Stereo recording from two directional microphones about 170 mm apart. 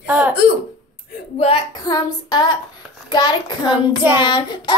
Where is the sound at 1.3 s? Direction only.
35° left (ahead or behind).